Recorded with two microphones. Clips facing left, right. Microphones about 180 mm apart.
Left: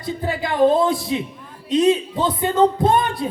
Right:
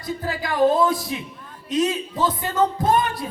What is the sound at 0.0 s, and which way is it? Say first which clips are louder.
A man's voice: left 3 dB; 25° left (ahead or behind).